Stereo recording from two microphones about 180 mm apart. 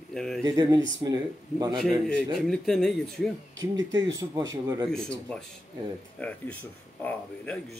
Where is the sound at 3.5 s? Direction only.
90° right.